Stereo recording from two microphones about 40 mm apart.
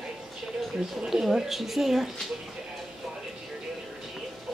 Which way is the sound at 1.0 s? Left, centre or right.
Centre.